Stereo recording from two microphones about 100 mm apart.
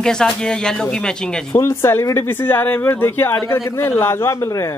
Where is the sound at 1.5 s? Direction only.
25° left (ahead or behind).